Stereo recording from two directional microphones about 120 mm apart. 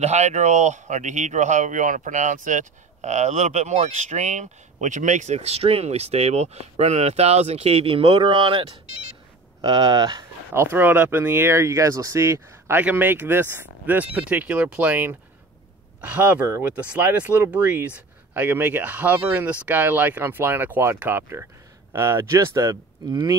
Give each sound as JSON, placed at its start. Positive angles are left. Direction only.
{"t": 0.0, "sound": "speech", "side_deg": -70}
{"t": 10.5, "sound": "speech", "side_deg": -20}